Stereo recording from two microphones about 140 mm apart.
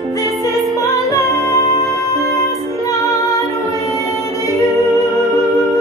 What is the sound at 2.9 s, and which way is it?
Music, 25° left (ahead or behind).